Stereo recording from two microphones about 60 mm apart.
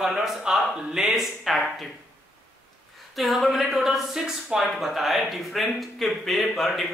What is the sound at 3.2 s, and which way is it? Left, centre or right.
Speech, centre.